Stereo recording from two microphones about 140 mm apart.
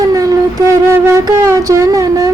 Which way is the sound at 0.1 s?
25° right (ahead or behind).